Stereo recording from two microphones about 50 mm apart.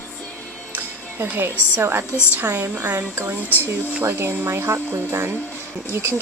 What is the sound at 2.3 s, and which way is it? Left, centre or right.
Speech, right.